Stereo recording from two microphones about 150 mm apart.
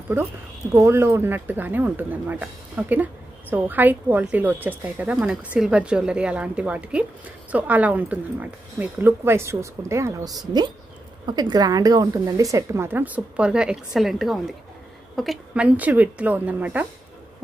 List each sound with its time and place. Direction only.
0.1 s a woman's voice: 15° right (ahead or behind)